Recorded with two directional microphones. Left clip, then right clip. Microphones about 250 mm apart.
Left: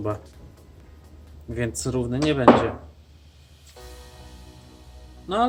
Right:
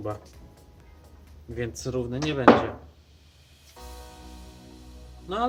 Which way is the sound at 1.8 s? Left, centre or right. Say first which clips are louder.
Left 5 dB; left.